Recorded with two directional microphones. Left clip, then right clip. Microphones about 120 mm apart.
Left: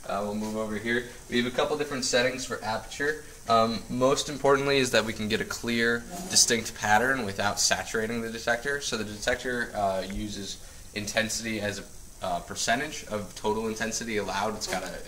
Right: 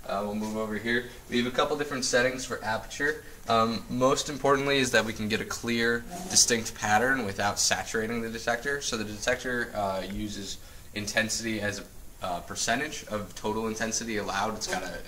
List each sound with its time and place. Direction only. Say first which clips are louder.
0.1 s speech: even; 5° left (ahead or behind)
4.7 s speech: even; 20° left (ahead or behind)